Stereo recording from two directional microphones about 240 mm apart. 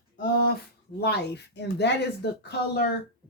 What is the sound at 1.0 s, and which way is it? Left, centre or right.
Speech, left.